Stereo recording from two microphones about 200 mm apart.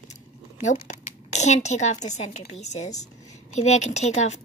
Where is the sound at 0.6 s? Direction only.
40° left (ahead or behind).